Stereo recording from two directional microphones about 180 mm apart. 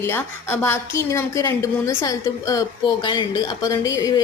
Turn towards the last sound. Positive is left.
turn(degrees=20)  # may be behind; listen again after turning